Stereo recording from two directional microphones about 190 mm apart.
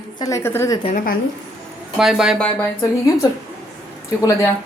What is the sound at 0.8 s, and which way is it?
Speech, 45° left (ahead or behind).